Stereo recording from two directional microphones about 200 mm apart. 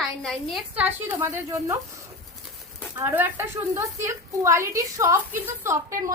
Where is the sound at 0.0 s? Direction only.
Centre (ahead or behind).